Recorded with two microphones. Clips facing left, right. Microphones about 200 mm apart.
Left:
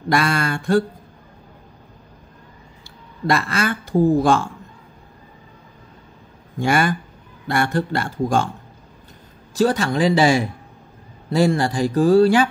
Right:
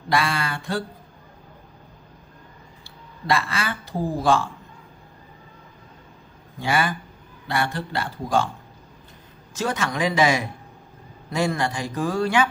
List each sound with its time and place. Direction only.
0.1 s speech: 45° left (ahead or behind)
3.3 s speech: 45° left (ahead or behind)
6.6 s speech: 45° left (ahead or behind)
9.5 s a man's voice: 35° left (ahead or behind)